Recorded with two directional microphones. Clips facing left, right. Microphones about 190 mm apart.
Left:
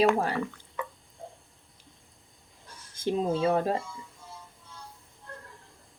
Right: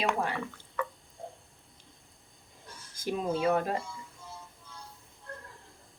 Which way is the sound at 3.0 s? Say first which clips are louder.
Left 3 dB; 30° left (ahead or behind).